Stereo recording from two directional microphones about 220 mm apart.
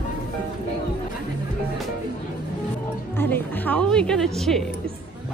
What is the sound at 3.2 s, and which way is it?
A woman's voice, 10° left (ahead or behind).